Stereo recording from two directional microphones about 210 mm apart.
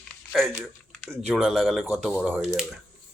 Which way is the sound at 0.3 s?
Centre (ahead or behind).